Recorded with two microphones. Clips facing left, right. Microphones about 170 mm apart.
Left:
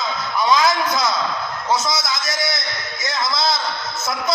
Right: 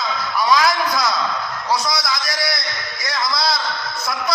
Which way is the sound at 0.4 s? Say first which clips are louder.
Even; 20° left (ahead or behind).